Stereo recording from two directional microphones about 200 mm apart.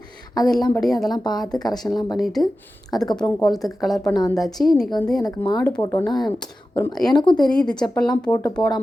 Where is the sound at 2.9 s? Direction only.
20° left (ahead or behind).